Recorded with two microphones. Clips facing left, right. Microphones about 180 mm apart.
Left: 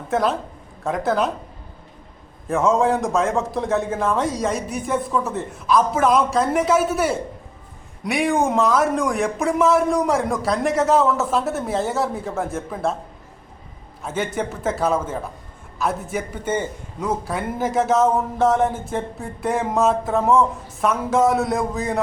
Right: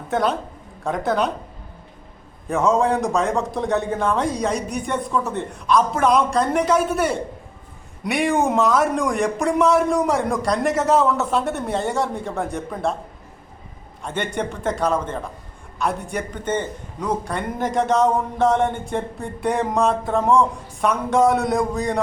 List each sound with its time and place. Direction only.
0.1 s speech: centre (ahead or behind)
2.5 s speech: centre (ahead or behind)
14.0 s speech: 5° left (ahead or behind)